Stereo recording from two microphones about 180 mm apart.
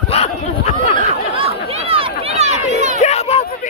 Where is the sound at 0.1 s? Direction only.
35° left (ahead or behind).